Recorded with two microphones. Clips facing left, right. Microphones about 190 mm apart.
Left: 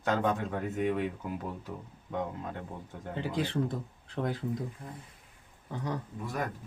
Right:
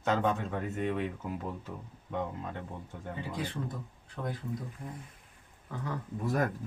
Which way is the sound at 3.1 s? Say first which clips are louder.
Left 5 dB; 85° left.